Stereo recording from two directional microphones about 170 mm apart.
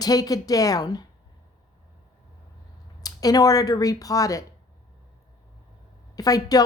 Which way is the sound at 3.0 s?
20° left (ahead or behind).